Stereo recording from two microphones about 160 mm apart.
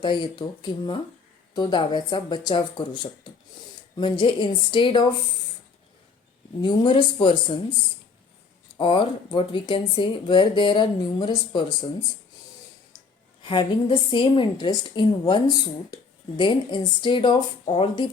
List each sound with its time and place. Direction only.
0.0 s a woman's voice: 30° left (ahead or behind)
6.6 s speech: 30° left (ahead or behind)
8.8 s speech: 30° left (ahead or behind)
13.4 s a woman's voice: 30° left (ahead or behind)